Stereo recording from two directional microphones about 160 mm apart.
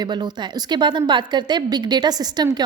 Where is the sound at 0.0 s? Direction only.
25° right (ahead or behind).